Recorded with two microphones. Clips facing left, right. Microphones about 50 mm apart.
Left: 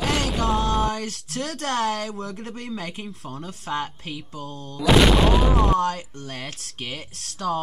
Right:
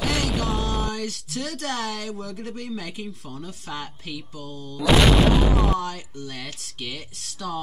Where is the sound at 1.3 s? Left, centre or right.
Left.